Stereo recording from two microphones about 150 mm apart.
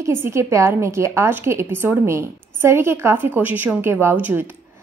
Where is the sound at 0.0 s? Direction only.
15° right (ahead or behind).